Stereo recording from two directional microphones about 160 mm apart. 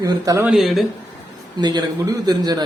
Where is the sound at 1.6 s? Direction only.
25° right (ahead or behind).